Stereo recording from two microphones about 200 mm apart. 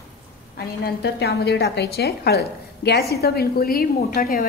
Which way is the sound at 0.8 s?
55° left (ahead or behind).